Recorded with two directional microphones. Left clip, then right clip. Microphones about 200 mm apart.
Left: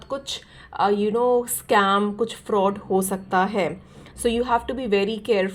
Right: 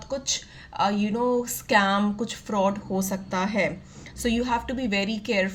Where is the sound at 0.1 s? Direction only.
20° left (ahead or behind).